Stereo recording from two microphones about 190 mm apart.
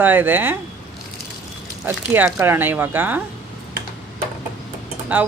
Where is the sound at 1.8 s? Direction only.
10° right (ahead or behind).